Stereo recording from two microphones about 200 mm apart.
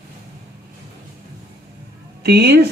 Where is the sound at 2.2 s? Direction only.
50° right (ahead or behind).